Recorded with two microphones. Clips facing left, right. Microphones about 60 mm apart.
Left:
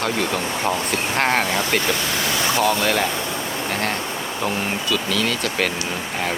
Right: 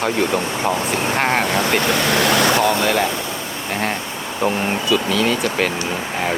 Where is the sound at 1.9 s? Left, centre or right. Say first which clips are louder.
Right 7 dB; right.